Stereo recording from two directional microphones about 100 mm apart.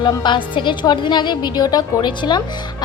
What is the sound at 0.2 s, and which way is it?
A woman's voice, 55° left (ahead or behind).